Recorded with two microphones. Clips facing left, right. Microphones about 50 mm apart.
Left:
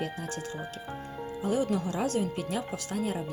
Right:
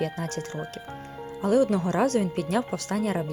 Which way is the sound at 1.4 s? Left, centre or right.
Right.